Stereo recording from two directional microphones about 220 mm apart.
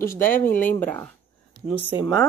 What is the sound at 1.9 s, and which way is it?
Speech, 20° left (ahead or behind).